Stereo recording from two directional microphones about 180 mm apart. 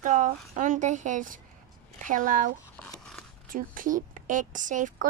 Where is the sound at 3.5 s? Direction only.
50° right (ahead or behind).